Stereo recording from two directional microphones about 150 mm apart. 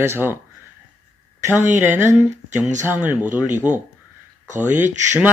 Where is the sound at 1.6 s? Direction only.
20° right (ahead or behind).